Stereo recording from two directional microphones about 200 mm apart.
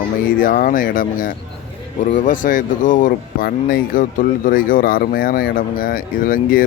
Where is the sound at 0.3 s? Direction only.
45° left (ahead or behind).